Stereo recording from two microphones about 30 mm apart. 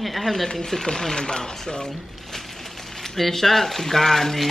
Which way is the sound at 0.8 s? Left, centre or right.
Left.